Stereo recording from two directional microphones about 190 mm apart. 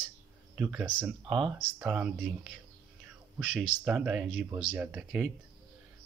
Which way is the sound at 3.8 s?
5° right (ahead or behind).